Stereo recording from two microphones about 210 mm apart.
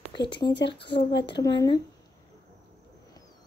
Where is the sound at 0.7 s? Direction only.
55° left (ahead or behind).